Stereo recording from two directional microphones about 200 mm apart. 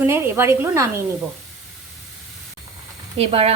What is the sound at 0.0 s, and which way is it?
A woman's voice, 10° right (ahead or behind).